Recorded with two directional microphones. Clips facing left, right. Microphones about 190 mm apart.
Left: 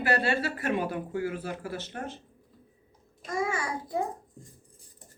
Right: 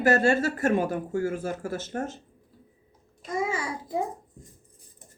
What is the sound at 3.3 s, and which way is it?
Babbling, 20° right (ahead or behind).